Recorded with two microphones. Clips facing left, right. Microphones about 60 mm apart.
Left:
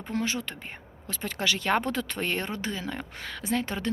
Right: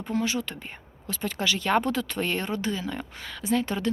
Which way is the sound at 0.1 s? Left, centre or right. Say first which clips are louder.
Right 2 dB; left.